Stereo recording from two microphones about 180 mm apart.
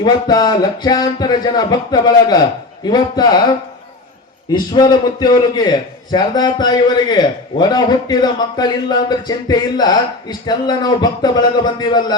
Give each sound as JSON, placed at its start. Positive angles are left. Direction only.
{"t": 0.0, "sound": "a man's voice", "side_deg": 20}
{"t": 4.5, "sound": "a man's voice", "side_deg": 25}